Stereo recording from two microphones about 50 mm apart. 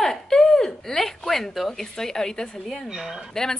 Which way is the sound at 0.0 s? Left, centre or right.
Centre.